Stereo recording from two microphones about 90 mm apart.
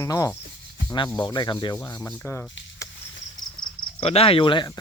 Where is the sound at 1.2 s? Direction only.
55° left (ahead or behind).